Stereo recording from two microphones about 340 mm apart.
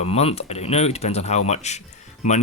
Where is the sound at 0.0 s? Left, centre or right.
Centre.